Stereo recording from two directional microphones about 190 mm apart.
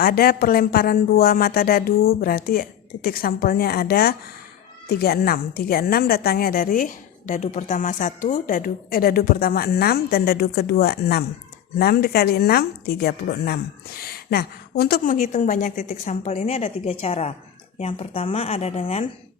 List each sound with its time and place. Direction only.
0.0 s a woman's voice: 50° left (ahead or behind); by 19.0 s 35° left (ahead or behind)